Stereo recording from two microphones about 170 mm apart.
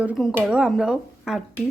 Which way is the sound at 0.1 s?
Centre (ahead or behind).